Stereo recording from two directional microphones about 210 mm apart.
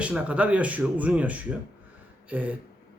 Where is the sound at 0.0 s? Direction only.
5° right (ahead or behind).